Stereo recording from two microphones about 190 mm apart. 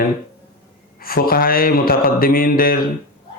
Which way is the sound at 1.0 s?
50° left (ahead or behind).